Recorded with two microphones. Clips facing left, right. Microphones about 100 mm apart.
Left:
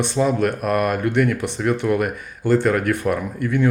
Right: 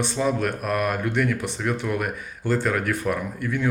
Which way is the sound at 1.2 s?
60° left (ahead or behind).